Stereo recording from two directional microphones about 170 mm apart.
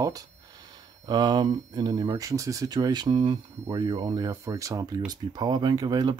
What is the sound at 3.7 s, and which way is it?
Speech, 15° right (ahead or behind).